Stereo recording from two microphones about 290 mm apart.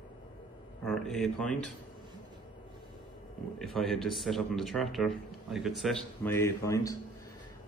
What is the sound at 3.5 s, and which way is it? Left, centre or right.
A man's voice, centre.